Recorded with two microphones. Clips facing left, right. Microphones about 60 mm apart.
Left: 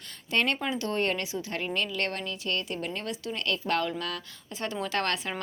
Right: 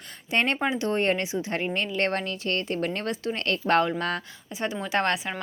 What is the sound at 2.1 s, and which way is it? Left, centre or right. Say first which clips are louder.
Speech: right 4 dB; right.